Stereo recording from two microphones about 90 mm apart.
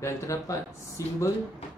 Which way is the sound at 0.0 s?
35° left (ahead or behind).